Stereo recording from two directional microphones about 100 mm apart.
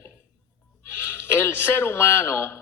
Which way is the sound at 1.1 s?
25° left (ahead or behind).